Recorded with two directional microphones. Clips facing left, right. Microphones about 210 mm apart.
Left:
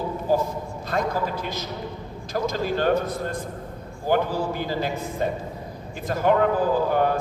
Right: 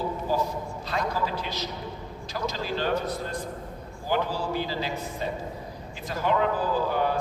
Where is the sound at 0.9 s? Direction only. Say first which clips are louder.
Left 4 dB; 50° left (ahead or behind).